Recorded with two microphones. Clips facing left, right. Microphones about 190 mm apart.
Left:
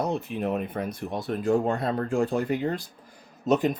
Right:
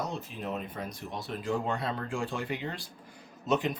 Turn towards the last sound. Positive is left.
turn(degrees=40)  # may be behind; listen again after turning